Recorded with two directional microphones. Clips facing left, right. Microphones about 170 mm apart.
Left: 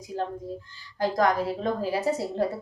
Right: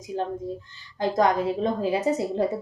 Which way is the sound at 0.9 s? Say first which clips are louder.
Right 2 dB; 20° right (ahead or behind).